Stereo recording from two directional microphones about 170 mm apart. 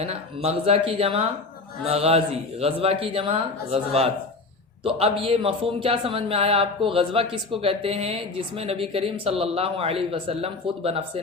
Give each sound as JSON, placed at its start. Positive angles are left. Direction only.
{"t": 0.0, "sound": "a man's voice", "side_deg": -35}